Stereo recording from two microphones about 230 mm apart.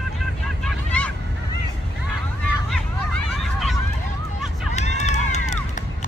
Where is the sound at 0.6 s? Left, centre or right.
Centre.